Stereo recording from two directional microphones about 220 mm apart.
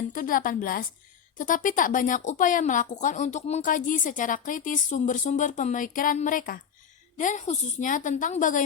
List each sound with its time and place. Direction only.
0.1 s a woman's voice: 40° left (ahead or behind)